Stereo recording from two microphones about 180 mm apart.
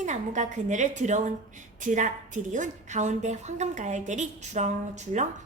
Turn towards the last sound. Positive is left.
turn(degrees=-40)  # may be behind; listen again after turning